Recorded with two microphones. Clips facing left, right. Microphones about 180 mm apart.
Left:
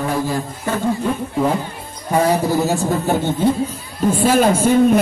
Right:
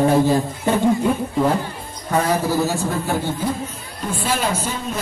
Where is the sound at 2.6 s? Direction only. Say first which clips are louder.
Left 3 dB; 20° left (ahead or behind).